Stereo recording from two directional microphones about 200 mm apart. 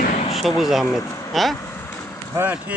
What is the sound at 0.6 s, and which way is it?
Speech, centre (ahead or behind).